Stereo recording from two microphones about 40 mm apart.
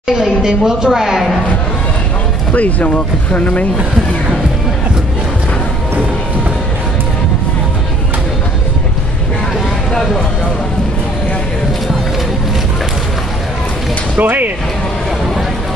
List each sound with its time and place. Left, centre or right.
0.2 s a woman's voice: centre
2.5 s speech: left
14.2 s speech: right